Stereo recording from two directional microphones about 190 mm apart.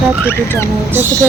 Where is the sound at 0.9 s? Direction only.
10° right (ahead or behind).